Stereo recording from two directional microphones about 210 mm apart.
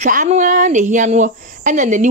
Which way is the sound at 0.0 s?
35° right (ahead or behind).